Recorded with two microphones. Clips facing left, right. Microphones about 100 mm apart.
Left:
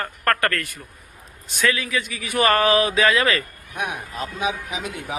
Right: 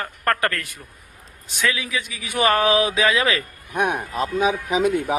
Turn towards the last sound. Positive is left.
turn(degrees=-50)  # may be behind; listen again after turning